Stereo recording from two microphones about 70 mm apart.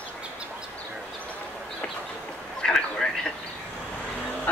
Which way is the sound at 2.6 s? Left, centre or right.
Centre.